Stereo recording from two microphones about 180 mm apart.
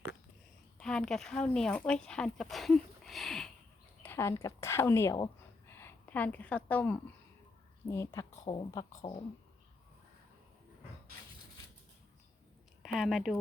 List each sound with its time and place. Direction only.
0.8 s speech: 5° left (ahead or behind)
4.0 s speech: 10° left (ahead or behind)
12.8 s speech: centre (ahead or behind)